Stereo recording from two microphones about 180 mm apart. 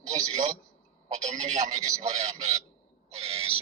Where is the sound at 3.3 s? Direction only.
35° right (ahead or behind).